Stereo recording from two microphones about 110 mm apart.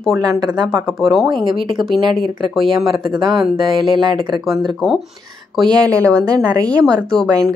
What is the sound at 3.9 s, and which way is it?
Speech, 45° right (ahead or behind).